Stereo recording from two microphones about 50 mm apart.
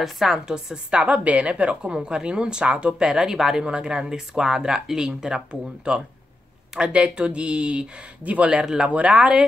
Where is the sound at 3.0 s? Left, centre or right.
Centre; by 8.5 s right.